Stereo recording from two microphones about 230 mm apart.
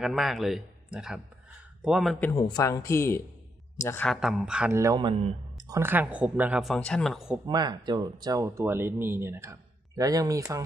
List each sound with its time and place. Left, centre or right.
0.0 s speech: centre
2.3 s speech: centre
7.4 s speech: centre